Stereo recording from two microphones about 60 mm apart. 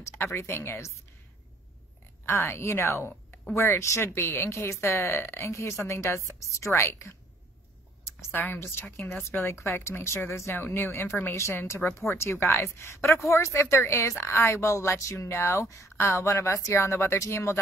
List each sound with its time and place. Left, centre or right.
0.2 s a woman's voice: left
2.2 s a woman's voice: left
8.3 s speech: left
8.8 s speech: left
9.5 s a woman's voice: left